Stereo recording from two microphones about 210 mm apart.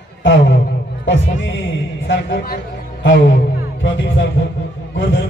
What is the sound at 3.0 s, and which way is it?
Music, 65° left (ahead or behind).